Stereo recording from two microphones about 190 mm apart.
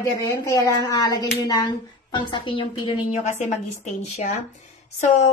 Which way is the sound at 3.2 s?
35° left (ahead or behind).